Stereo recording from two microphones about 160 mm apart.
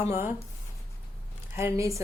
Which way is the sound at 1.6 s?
20° right (ahead or behind).